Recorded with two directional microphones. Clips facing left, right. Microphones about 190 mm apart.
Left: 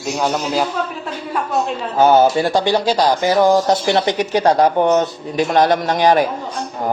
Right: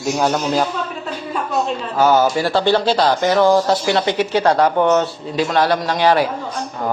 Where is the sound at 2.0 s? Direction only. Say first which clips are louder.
Left 3 dB; 25° left (ahead or behind).